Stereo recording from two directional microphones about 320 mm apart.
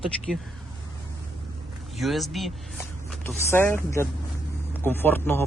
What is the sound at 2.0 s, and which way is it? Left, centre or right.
Speech, centre.